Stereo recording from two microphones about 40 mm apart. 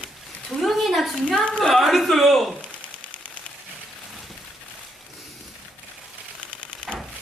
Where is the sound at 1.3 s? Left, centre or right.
Left.